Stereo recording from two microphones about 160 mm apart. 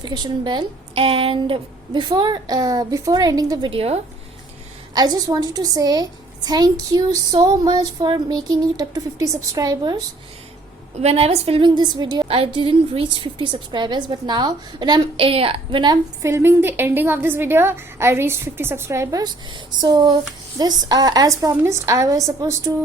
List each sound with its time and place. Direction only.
0.0 s a woman's voice: 25° right (ahead or behind)
3.7 s a woman's voice: 40° right (ahead or behind)
4.9 s a woman's voice: 25° right (ahead or behind)
11.0 s a woman's voice: 40° right (ahead or behind)
16.2 s a woman's voice: 15° right (ahead or behind)